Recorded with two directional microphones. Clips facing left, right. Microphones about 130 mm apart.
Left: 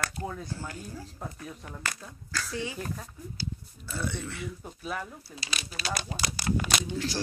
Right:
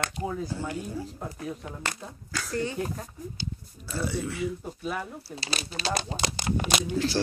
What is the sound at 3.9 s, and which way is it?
Speech, 5° right (ahead or behind).